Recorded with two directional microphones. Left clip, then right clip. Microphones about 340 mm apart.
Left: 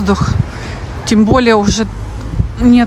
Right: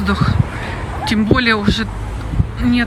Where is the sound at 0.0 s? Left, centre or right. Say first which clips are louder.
Left 3 dB; centre.